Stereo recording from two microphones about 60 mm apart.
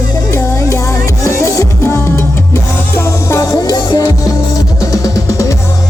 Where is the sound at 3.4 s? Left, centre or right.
Left.